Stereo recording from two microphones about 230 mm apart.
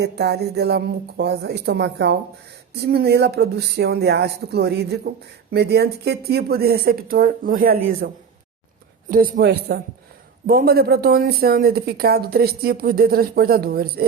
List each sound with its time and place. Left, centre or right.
0.0 s speech: right